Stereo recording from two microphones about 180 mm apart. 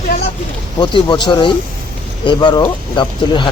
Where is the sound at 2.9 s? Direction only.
25° left (ahead or behind).